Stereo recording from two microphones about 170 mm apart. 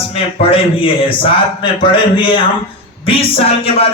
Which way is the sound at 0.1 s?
35° left (ahead or behind).